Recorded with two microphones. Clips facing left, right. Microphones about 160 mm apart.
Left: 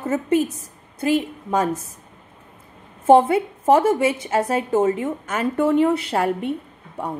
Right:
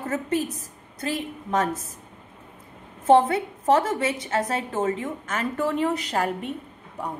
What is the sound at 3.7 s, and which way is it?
Speech, 30° left (ahead or behind).